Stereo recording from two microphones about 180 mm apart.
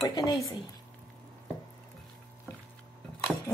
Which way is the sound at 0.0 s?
20° left (ahead or behind).